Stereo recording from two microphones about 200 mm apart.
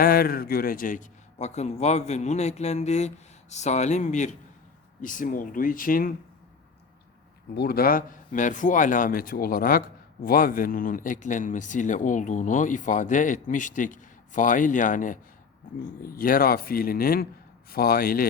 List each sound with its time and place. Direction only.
0.0 s a man's voice: 50° left (ahead or behind)
7.5 s a man's voice: 50° left (ahead or behind)